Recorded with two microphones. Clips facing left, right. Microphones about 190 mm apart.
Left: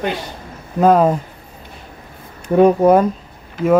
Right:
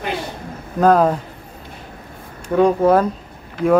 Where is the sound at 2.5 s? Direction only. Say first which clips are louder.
Left 3 dB; 15° left (ahead or behind).